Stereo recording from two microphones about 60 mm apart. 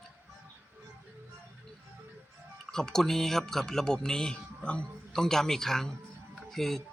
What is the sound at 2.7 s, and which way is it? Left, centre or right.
Speech, centre.